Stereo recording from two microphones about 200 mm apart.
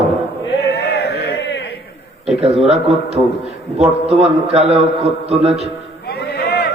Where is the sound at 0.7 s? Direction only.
55° left (ahead or behind).